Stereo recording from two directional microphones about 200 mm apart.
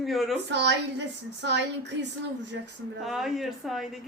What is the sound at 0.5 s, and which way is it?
A woman's voice, 60° right (ahead or behind).